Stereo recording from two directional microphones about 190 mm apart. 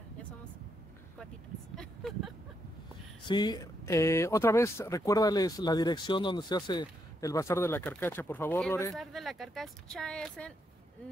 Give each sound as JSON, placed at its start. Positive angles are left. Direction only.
{"t": 1.8, "sound": "a sound", "side_deg": 0}
{"t": 3.3, "sound": "speech", "side_deg": 20}
{"t": 8.9, "sound": "speech", "side_deg": 0}